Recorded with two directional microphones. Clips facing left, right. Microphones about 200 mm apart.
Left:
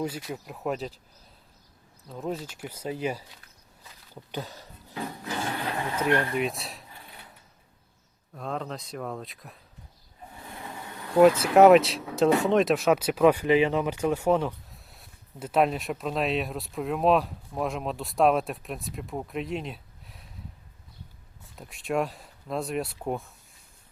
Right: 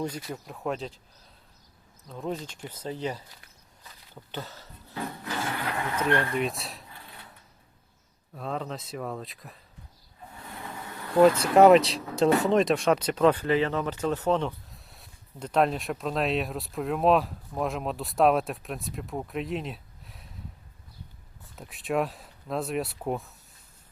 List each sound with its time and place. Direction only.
0.0 s speech: 5° left (ahead or behind)
2.0 s speech: 5° left (ahead or behind)
4.1 s a sound: 15° left (ahead or behind)
5.7 s speech: 15° left (ahead or behind)
6.3 s speech: centre (ahead or behind)
8.4 s speech: centre (ahead or behind)
10.7 s insect: 20° left (ahead or behind)
11.1 s speech: 5° left (ahead or behind)
21.4 s speech: centre (ahead or behind)